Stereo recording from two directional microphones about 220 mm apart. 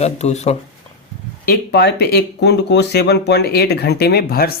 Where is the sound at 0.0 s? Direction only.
30° left (ahead or behind).